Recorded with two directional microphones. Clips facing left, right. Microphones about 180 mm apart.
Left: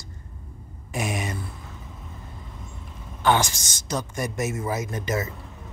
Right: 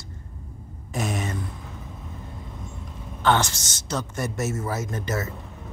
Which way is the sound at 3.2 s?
10° left (ahead or behind).